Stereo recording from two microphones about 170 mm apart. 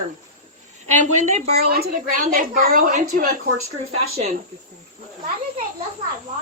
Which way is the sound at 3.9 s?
35° right (ahead or behind).